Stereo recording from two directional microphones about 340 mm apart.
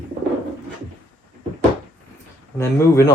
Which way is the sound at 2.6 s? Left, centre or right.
Centre.